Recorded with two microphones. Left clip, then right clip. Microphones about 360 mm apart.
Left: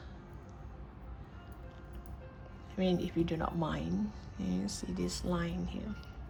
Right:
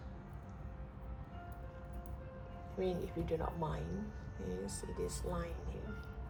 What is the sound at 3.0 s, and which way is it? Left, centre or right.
Speech, left.